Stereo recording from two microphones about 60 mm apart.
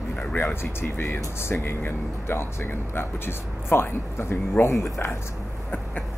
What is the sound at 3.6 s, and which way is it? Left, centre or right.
Speech, left.